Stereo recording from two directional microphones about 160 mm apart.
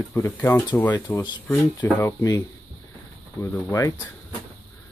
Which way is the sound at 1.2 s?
25° left (ahead or behind).